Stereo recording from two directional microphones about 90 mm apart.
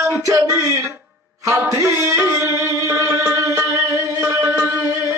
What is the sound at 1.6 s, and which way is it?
Music, 35° right (ahead or behind).